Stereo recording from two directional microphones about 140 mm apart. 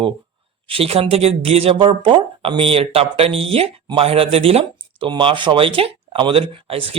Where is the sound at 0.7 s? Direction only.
45° right (ahead or behind).